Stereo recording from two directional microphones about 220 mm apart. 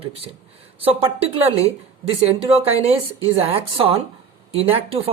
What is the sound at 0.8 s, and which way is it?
Speech, 25° right (ahead or behind).